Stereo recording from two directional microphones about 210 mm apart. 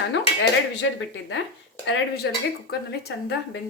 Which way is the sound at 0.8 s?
60° left (ahead or behind).